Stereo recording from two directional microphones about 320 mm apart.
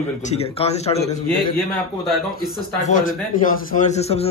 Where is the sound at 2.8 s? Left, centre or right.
Left.